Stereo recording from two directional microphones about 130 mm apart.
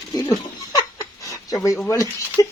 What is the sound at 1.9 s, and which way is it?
Speech, 25° left (ahead or behind).